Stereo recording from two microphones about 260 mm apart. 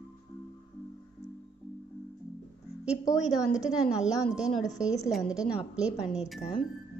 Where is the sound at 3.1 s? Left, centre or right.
Centre.